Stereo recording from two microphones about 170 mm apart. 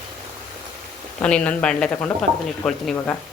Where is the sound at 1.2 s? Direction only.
5° left (ahead or behind).